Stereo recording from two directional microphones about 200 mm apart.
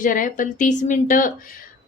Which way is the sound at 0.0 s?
40° left (ahead or behind).